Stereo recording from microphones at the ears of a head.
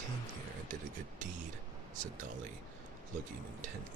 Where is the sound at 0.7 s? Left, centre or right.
Right.